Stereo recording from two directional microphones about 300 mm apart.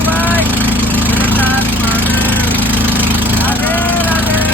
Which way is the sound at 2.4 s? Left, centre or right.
Centre.